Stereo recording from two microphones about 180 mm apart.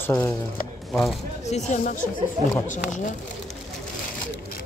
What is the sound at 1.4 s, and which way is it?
Speech, 40° left (ahead or behind).